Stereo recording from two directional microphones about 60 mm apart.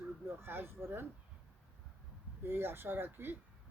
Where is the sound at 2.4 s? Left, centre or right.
Right.